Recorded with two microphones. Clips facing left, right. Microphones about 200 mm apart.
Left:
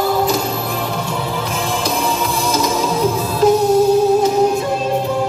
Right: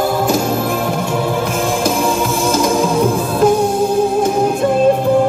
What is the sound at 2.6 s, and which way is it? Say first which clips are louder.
Music: right 3 dB; 50° right (ahead or behind).